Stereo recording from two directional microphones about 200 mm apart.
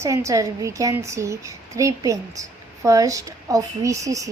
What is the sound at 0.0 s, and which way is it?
A woman's voice, 15° right (ahead or behind).